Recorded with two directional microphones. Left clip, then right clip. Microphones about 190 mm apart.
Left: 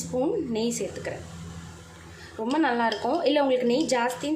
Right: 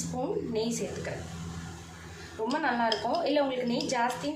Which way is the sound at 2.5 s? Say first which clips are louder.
Left 4 dB; 50° left (ahead or behind).